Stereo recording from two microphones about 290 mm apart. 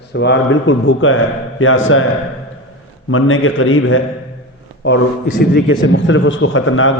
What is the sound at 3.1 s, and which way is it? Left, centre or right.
A man's voice, left.